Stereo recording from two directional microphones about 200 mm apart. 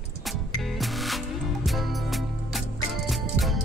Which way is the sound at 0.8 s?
Centre (ahead or behind).